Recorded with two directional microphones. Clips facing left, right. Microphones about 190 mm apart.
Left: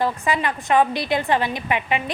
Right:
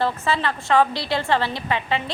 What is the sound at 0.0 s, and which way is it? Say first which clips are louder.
A woman's voice: left 1 dB; 15° left (ahead or behind).